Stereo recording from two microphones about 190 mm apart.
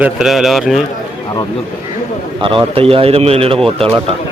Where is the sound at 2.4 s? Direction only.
30° right (ahead or behind).